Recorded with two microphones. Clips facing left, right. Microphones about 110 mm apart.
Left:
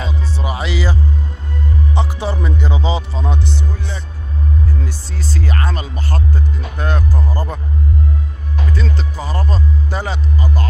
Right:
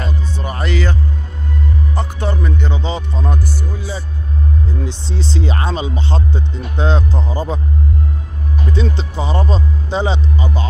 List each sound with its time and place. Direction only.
0.4 s speech: 5° left (ahead or behind)
2.0 s speech: 5° left (ahead or behind)
4.8 s speech: 25° right (ahead or behind)
8.7 s speech: 25° right (ahead or behind)